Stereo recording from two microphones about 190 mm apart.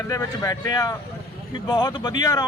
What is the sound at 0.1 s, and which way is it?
A man's voice, 20° left (ahead or behind).